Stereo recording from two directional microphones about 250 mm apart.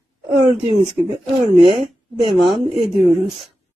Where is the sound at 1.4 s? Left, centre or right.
Centre.